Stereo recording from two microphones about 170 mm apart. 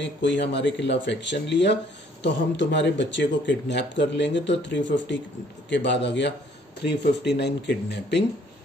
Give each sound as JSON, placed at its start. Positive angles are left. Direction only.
{"t": 0.0, "sound": "speech", "side_deg": 90}
{"t": 7.3, "sound": "speech", "side_deg": 85}